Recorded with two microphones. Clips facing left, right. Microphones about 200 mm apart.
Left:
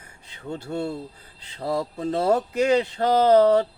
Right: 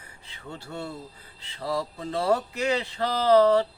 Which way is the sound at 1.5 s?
45° left (ahead or behind).